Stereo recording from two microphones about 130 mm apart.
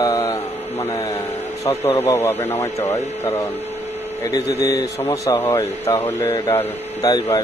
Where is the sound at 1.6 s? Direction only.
25° left (ahead or behind).